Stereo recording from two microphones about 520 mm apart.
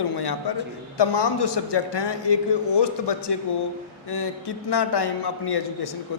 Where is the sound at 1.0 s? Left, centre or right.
Left.